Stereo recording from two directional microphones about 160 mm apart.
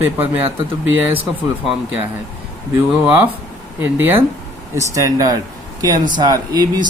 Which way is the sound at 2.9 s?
5° right (ahead or behind).